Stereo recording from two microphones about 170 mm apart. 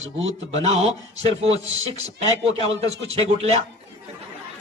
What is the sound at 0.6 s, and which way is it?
Speech, 40° right (ahead or behind).